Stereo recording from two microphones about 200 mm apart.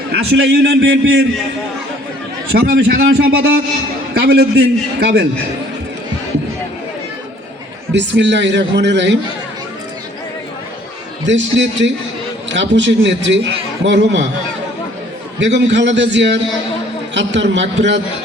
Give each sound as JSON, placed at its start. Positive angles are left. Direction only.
{"t": 0.1, "sound": "a man's voice", "side_deg": -55}
{"t": 2.5, "sound": "a man's voice", "side_deg": -55}
{"t": 7.9, "sound": "a man's voice", "side_deg": -60}
{"t": 11.3, "sound": "a man's voice", "side_deg": -65}
{"t": 15.4, "sound": "a man's voice", "side_deg": -65}